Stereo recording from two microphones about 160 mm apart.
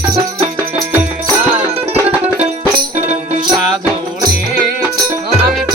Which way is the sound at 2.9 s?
35° right (ahead or behind).